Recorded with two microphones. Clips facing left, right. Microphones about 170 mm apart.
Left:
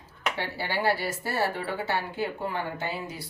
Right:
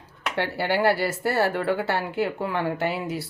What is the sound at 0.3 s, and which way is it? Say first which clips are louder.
Speech: right 9 dB; 70° right (ahead or behind).